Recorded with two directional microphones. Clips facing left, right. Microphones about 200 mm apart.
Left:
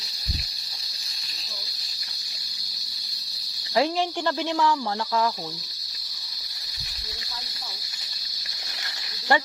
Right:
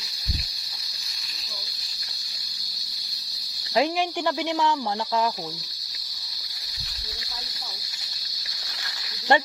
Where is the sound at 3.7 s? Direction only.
15° right (ahead or behind).